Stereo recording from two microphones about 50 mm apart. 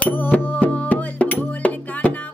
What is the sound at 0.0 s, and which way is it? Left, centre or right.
Music, left.